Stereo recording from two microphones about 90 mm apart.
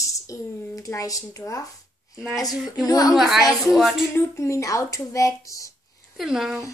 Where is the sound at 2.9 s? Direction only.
45° left (ahead or behind).